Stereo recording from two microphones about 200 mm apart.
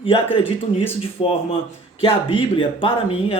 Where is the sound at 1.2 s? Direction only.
30° left (ahead or behind).